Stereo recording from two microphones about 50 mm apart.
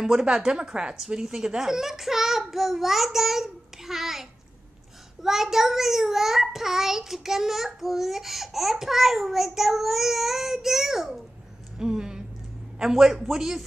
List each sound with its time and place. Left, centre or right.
0.0 s a child's voice: centre
11.8 s a sound: centre
12.7 s speech: centre